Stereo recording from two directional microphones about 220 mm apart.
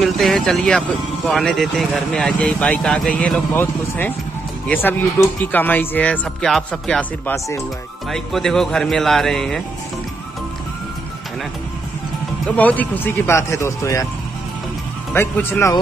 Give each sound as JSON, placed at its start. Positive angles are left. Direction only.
{"t": 0.0, "sound": "speech", "side_deg": 0}
{"t": 12.4, "sound": "speech", "side_deg": 5}
{"t": 15.1, "sound": "speech", "side_deg": 10}